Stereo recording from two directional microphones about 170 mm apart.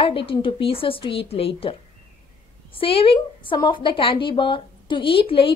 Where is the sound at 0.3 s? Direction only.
30° left (ahead or behind).